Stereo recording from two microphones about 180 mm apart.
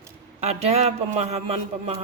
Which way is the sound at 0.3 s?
35° right (ahead or behind).